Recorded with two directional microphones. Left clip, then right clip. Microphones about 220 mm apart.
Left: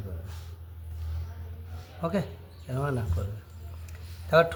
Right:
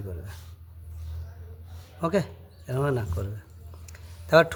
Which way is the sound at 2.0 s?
50° right (ahead or behind).